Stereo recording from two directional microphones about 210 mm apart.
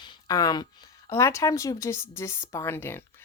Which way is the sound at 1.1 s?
15° left (ahead or behind).